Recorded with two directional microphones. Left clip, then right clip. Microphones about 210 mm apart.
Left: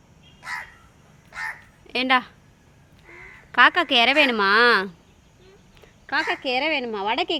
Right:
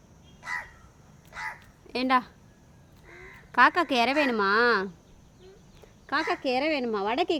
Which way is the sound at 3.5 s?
5° right (ahead or behind).